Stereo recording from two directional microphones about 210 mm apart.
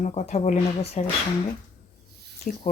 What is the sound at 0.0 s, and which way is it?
Speech, 35° left (ahead or behind).